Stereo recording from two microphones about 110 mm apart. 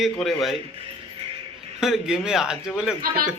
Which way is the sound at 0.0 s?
Centre (ahead or behind).